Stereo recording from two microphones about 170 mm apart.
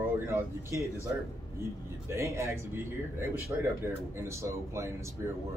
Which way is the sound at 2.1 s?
15° right (ahead or behind).